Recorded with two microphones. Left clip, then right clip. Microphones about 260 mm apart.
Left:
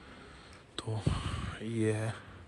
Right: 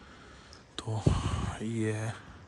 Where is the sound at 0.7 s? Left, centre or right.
Centre.